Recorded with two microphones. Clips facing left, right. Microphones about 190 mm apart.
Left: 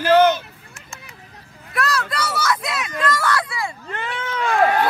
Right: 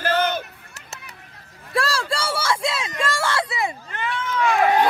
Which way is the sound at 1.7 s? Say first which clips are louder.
Even; 30° right (ahead or behind).